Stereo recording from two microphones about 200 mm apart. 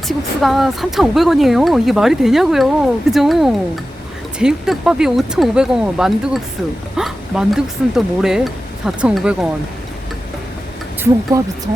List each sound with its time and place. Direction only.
0.1 s speech: centre (ahead or behind)
11.3 s speech: 15° right (ahead or behind)